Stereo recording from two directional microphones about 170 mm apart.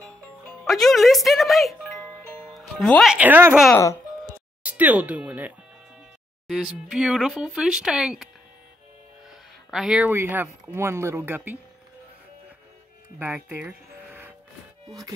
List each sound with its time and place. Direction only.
0.7 s speech: centre (ahead or behind)
4.6 s speech: 10° right (ahead or behind)
9.7 s speech: 5° right (ahead or behind)
13.2 s speech: 10° right (ahead or behind)